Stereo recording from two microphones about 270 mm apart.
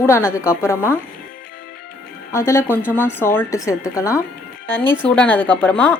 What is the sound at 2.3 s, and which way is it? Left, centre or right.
A woman's voice, centre.